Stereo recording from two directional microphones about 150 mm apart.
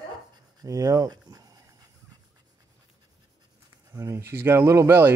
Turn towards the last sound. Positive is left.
turn(degrees=-15)  # may be behind; listen again after turning